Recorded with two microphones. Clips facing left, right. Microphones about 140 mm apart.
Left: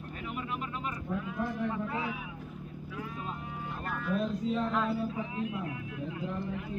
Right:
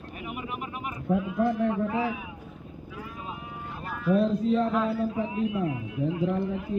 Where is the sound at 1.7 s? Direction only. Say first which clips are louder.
Right 7 dB; 15° right (ahead or behind).